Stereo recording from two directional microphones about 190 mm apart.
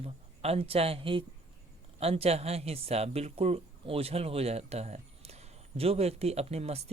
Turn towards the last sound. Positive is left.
turn(degrees=-35)  # may be behind; listen again after turning